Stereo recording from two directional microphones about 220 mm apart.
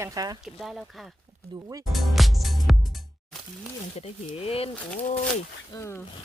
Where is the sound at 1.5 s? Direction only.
15° right (ahead or behind).